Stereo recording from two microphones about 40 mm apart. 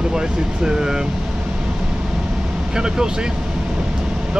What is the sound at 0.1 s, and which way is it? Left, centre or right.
Speech, centre.